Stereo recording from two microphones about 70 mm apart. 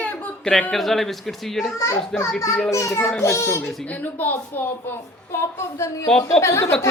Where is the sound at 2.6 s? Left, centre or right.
Left.